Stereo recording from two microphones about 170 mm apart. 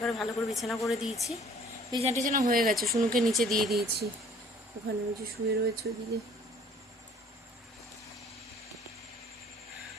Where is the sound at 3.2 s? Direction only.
Centre (ahead or behind).